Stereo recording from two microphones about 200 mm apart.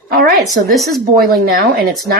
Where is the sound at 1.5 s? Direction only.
50° right (ahead or behind).